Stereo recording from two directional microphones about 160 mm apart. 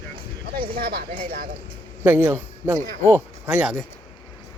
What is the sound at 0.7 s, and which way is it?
Speech, 75° right (ahead or behind).